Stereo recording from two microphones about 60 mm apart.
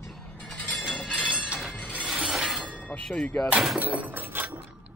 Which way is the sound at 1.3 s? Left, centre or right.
Centre.